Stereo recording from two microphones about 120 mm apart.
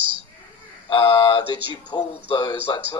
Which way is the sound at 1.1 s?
35° left (ahead or behind).